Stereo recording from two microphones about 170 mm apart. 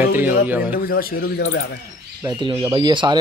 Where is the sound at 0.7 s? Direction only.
60° left (ahead or behind); by 1.7 s 90° left.